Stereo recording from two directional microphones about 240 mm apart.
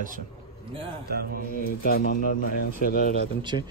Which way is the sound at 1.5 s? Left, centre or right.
Left.